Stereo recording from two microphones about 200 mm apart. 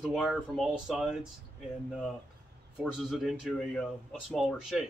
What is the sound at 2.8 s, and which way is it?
Speech, 5° right (ahead or behind).